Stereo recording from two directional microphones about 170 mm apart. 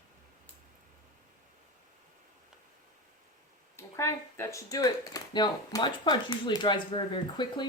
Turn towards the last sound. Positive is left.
turn(degrees=30)  # may be behind; listen again after turning